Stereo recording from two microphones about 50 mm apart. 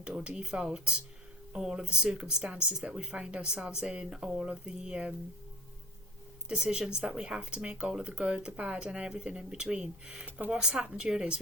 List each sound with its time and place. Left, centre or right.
0.0 s speech: centre
6.5 s speech: centre